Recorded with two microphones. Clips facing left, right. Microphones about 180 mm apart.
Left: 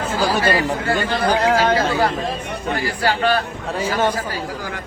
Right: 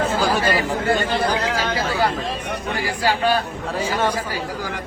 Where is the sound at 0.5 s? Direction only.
20° right (ahead or behind).